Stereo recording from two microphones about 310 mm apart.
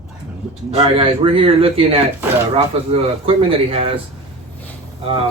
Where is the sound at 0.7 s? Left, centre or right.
Centre.